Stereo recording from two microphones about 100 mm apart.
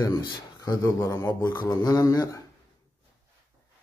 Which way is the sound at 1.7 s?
40° left (ahead or behind).